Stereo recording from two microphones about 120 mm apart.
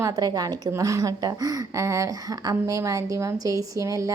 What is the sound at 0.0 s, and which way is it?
A woman's voice, 30° right (ahead or behind).